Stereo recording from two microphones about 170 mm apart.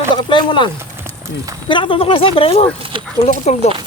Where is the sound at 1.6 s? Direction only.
30° left (ahead or behind).